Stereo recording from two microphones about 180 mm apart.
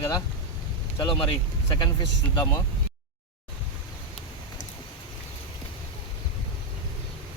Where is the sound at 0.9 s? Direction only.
30° left (ahead or behind).